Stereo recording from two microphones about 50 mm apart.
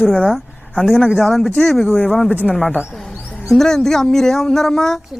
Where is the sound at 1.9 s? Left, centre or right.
Left.